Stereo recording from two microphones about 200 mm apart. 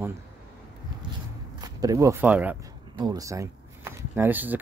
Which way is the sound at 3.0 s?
20° right (ahead or behind).